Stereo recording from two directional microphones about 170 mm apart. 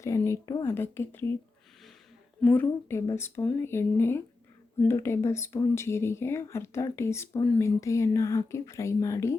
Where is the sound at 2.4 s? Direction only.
10° left (ahead or behind).